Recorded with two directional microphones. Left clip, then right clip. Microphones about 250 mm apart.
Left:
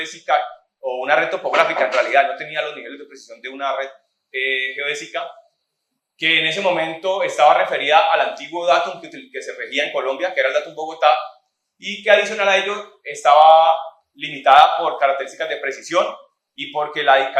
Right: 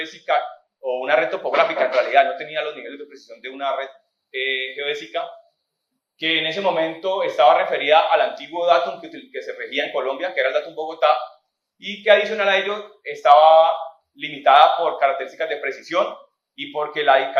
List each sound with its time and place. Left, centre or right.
0.0 s speech: left